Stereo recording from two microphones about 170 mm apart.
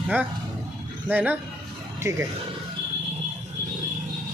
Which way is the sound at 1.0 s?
10° right (ahead or behind).